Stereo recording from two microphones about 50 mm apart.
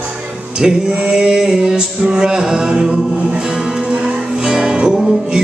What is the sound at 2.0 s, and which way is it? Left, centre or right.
Music, centre.